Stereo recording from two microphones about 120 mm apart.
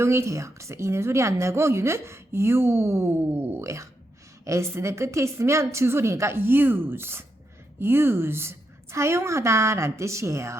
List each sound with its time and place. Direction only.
0.0 s a woman's voice: 20° right (ahead or behind)